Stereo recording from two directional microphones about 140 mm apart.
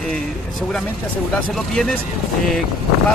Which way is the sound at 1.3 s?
5° left (ahead or behind).